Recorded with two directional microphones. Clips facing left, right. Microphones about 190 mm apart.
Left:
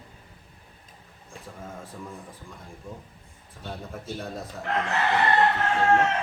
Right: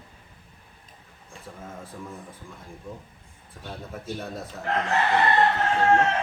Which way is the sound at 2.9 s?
Centre (ahead or behind).